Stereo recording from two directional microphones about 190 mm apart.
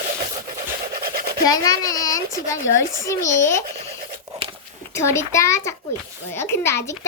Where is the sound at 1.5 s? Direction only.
20° left (ahead or behind).